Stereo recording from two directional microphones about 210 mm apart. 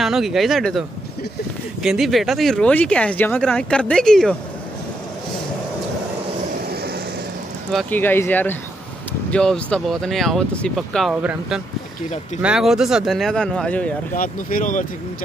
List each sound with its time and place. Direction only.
0.0 s speech: centre (ahead or behind)
6.7 s vehicle: 45° right (ahead or behind)
7.7 s speech: 10° left (ahead or behind)
14.1 s speech: 40° left (ahead or behind)